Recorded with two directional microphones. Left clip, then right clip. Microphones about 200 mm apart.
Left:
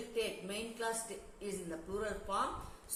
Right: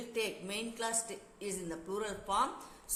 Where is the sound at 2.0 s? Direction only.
55° right (ahead or behind).